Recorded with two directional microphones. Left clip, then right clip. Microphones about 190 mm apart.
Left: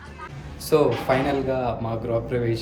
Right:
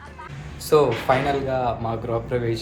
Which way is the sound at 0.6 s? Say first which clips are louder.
Right 2 dB; 10° left (ahead or behind).